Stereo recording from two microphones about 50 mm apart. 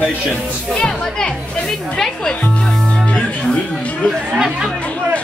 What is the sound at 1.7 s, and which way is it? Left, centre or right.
Speech, centre.